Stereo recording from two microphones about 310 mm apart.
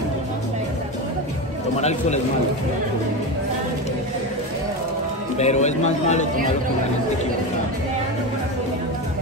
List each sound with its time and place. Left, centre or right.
1.8 s a man's voice: left
5.4 s a man's voice: left